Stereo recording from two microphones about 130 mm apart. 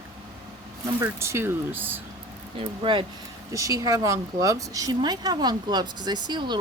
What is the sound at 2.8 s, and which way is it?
Speech, 40° right (ahead or behind).